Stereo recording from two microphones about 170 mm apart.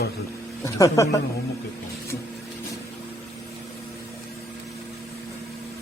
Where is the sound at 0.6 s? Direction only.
20° left (ahead or behind).